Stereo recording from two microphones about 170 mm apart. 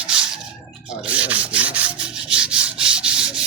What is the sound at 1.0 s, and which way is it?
Rub, 5° right (ahead or behind).